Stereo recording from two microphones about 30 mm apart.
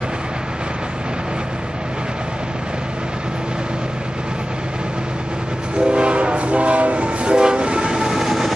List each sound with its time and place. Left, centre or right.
5.8 s train: right
7.2 s train: right; by 8.5 s centre